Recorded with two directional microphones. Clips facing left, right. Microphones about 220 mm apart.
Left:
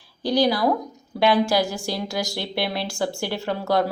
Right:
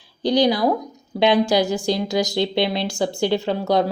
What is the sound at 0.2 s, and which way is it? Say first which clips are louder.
A woman's voice: right 3 dB; 20° right (ahead or behind).